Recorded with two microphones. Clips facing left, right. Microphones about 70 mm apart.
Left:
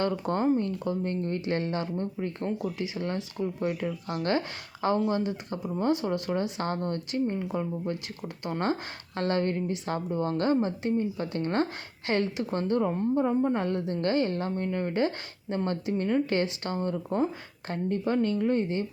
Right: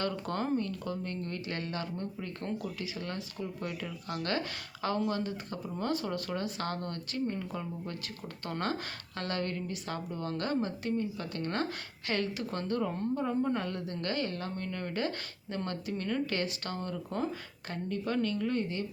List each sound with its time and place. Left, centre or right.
0.0 s speech: left